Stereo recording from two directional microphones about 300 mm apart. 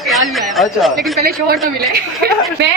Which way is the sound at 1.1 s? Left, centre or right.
Right.